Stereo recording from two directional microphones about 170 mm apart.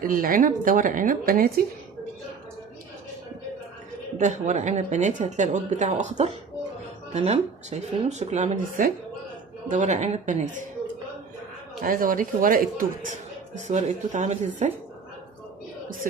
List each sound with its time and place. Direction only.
0.0 s speech: 55° right (ahead or behind)
4.2 s speech: 45° right (ahead or behind)
11.8 s speech: 55° right (ahead or behind)
13.5 s speech: 45° right (ahead or behind)